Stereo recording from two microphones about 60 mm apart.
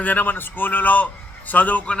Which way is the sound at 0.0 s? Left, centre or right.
Left.